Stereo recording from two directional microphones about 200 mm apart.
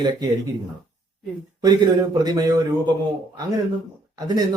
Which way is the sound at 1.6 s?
20° right (ahead or behind).